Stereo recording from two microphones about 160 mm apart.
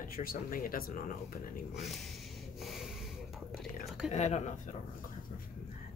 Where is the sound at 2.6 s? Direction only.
Centre (ahead or behind).